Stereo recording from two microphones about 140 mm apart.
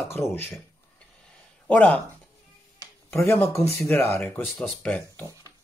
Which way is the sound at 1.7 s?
10° left (ahead or behind).